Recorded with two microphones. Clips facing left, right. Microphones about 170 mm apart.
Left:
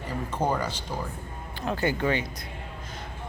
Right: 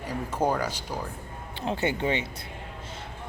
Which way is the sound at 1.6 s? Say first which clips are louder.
Left 1 dB; 25° right (ahead or behind).